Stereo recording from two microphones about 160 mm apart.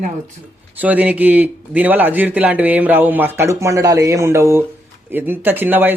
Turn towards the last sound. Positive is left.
turn(degrees=-10)  # may be behind; listen again after turning